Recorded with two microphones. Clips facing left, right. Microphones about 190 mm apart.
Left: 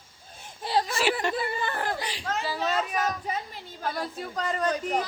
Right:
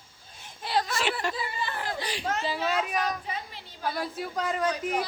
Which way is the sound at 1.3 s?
55° left (ahead or behind).